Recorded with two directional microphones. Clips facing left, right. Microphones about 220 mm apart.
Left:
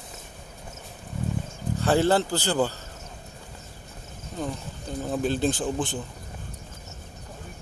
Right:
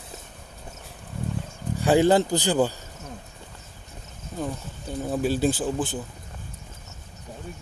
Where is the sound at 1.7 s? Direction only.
15° right (ahead or behind).